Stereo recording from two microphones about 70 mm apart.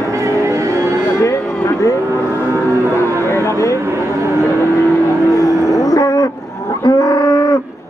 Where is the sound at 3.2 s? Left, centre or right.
Left.